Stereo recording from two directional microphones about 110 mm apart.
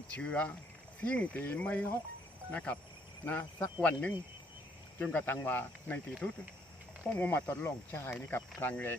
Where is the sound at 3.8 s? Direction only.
15° left (ahead or behind).